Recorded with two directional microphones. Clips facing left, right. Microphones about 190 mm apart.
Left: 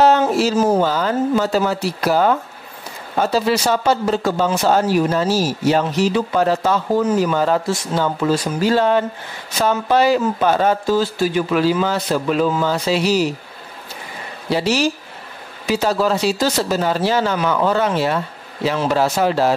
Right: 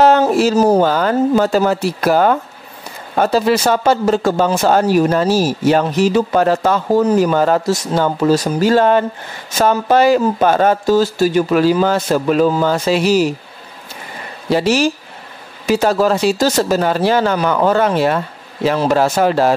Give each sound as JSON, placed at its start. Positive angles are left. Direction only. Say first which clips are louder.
{"t": 0.3, "sound": "speech", "louder": "right 4 dB", "side_deg": -50}
{"t": 0.6, "sound": "speech", "louder": "right 4 dB", "side_deg": -35}
{"t": 0.8, "sound": "speech", "louder": "right 4 dB", "side_deg": -55}
{"t": 1.3, "sound": "a man's voice", "louder": "right 4 dB", "side_deg": -45}
{"t": 7.0, "sound": "speech", "louder": "right 6 dB", "side_deg": -35}
{"t": 7.3, "sound": "a man's voice", "louder": "right 4 dB", "side_deg": -50}
{"t": 14.5, "sound": "a man's voice", "louder": "right 4 dB", "side_deg": -50}